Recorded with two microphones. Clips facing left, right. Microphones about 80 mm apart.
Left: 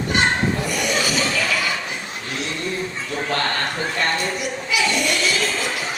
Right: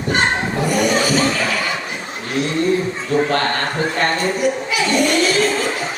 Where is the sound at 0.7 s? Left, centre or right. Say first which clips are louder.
Right 6 dB; right.